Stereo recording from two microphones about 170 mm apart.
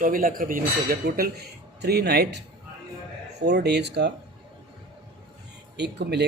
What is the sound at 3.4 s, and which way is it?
Speech, 80° right.